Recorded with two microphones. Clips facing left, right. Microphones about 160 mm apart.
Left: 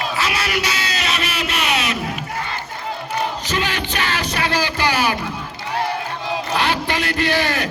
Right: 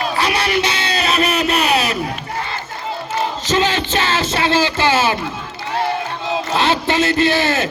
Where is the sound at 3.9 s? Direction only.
25° right (ahead or behind).